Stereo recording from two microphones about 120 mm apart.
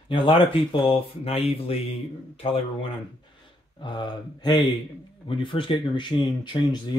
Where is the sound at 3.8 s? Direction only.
40° left (ahead or behind).